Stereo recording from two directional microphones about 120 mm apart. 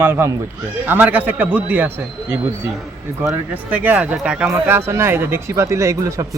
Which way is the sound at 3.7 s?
15° right (ahead or behind).